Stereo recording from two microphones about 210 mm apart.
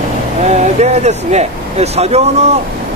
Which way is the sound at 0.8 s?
30° right (ahead or behind).